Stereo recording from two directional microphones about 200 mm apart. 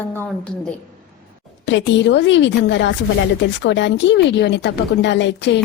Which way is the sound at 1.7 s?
65° left (ahead or behind).